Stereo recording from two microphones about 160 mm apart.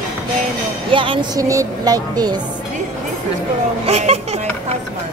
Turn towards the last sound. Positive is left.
turn(degrees=-40)  # may be behind; listen again after turning